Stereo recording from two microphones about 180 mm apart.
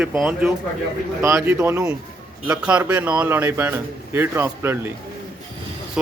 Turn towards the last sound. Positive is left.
turn(degrees=-10)  # may be behind; listen again after turning